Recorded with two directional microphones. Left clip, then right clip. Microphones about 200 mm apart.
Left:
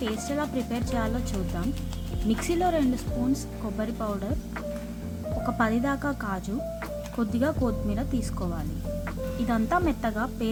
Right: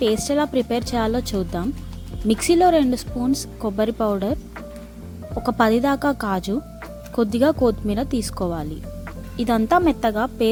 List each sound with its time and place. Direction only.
0.1 s a woman's voice: 40° right (ahead or behind)
5.5 s a woman's voice: 45° right (ahead or behind)